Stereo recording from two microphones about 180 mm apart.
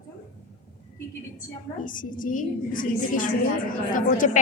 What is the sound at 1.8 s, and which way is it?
A woman's voice, 50° left (ahead or behind).